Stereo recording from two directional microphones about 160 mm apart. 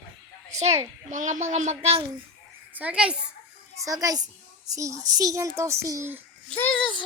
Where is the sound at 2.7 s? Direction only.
10° right (ahead or behind).